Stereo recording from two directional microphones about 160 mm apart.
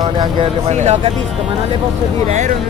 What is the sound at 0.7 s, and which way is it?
Speech, 45° right (ahead or behind).